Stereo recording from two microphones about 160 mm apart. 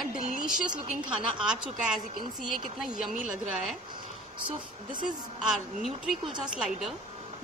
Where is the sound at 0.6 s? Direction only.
30° right (ahead or behind).